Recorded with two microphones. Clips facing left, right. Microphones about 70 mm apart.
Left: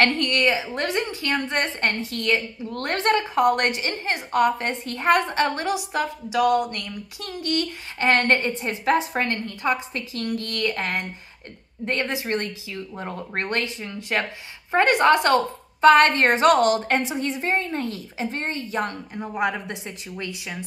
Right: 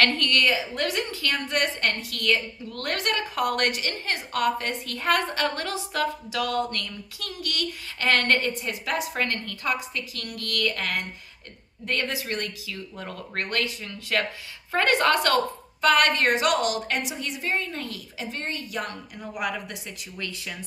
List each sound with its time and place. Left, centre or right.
0.0 s a woman's voice: left